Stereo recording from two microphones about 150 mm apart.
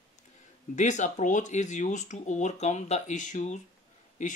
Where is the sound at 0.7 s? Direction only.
55° left (ahead or behind).